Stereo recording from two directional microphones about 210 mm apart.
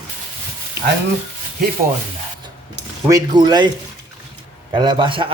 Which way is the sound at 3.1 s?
20° right (ahead or behind).